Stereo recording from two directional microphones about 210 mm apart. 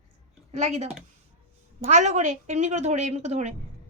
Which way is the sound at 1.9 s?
35° right (ahead or behind).